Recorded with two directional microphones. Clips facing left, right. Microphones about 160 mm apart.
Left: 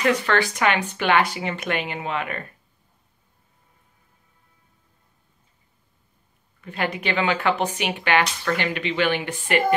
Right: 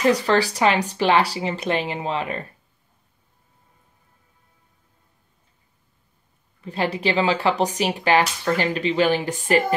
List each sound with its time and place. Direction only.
0.0 s speech: 35° right (ahead or behind)
6.6 s speech: 30° right (ahead or behind)